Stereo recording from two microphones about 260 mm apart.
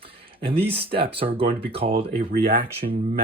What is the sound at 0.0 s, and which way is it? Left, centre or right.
Speech, right.